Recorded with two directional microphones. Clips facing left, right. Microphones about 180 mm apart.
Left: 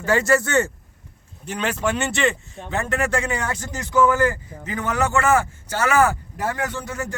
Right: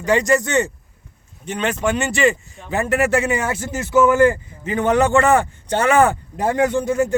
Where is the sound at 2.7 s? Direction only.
15° right (ahead or behind).